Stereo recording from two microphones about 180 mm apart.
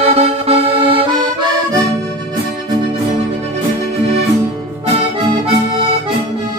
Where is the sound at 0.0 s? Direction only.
35° right (ahead or behind).